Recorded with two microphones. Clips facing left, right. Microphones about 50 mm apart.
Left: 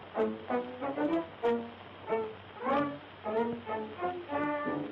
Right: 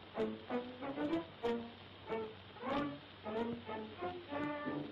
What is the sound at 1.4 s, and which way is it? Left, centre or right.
Music, left.